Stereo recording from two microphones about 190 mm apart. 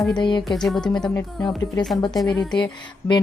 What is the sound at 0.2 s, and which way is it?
Speech, 25° left (ahead or behind).